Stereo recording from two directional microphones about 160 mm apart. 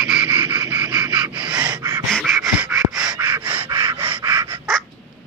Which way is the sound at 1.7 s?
25° right (ahead or behind).